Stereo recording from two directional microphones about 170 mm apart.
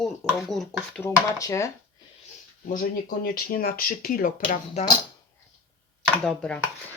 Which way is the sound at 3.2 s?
60° left (ahead or behind).